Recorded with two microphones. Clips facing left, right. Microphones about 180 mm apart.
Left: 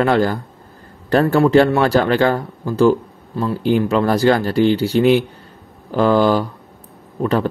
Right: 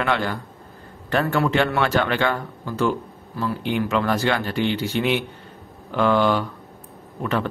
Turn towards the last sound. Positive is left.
turn(degrees=35)  # may be behind; listen again after turning